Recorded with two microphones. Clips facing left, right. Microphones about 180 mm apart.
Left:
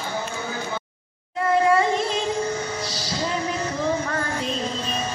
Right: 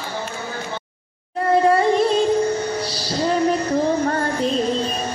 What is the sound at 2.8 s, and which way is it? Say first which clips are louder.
Music: right 3 dB; 30° right (ahead or behind).